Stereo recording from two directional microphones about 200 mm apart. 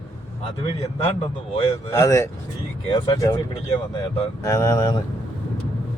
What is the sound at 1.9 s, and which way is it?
A man's voice, 15° left (ahead or behind).